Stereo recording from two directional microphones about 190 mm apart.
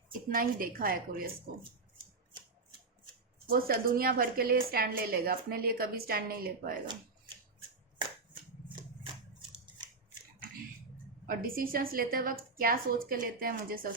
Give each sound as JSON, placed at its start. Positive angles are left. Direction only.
{"t": 0.1, "sound": "a woman's voice", "side_deg": -45}
{"t": 3.4, "sound": "a woman's voice", "side_deg": -50}
{"t": 11.3, "sound": "a woman's voice", "side_deg": -50}